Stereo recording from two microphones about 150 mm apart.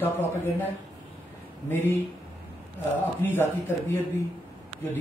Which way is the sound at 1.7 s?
15° left (ahead or behind).